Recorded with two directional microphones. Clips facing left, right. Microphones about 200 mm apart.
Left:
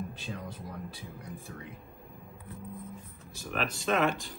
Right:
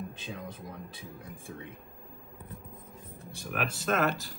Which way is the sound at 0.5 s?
20° right (ahead or behind).